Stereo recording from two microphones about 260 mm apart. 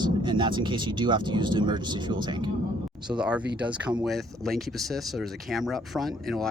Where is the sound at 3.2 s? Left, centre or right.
Centre.